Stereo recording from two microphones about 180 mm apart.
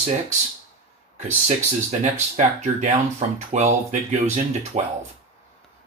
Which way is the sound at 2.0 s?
45° right (ahead or behind).